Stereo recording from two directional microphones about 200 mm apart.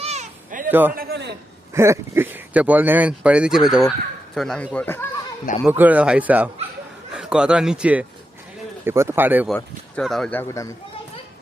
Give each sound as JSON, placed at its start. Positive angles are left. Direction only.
{"t": 0.0, "sound": "cat", "side_deg": -35}
{"t": 0.7, "sound": "a man's voice", "side_deg": -10}
{"t": 0.9, "sound": "a sound", "side_deg": -55}
{"t": 1.7, "sound": "speech", "side_deg": -15}
{"t": 5.6, "sound": "speech", "side_deg": -10}
{"t": 9.6, "sound": "speech", "side_deg": 5}